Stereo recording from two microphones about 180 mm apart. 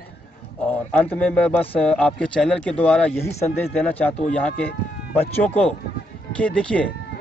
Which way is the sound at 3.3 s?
35° left (ahead or behind).